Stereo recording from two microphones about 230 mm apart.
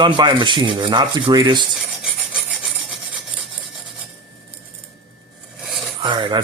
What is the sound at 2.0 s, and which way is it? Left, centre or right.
Rub, centre.